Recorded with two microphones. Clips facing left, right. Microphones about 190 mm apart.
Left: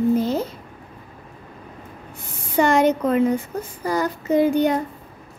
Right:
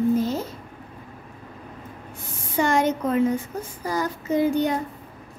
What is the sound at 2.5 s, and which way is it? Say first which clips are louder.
Speech: left 4 dB; 65° left (ahead or behind).